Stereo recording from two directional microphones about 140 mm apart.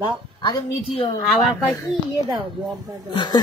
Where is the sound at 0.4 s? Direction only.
35° left (ahead or behind).